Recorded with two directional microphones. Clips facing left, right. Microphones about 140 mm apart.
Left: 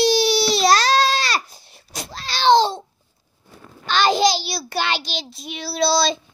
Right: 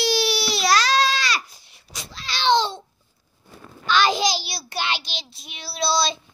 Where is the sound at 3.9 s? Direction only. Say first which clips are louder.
Left 3 dB; 30° left (ahead or behind).